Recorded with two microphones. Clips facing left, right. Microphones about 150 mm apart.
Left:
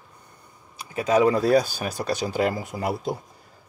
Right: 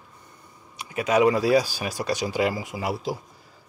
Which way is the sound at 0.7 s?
35° left (ahead or behind).